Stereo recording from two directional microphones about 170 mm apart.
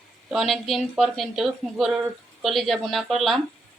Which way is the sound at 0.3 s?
Centre (ahead or behind).